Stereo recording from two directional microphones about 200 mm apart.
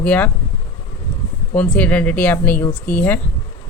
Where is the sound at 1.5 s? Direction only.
5° left (ahead or behind).